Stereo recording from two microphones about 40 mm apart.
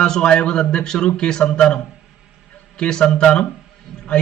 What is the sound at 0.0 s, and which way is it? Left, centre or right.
A man's voice, centre.